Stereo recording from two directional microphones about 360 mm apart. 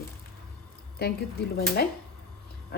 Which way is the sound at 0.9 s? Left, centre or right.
Left.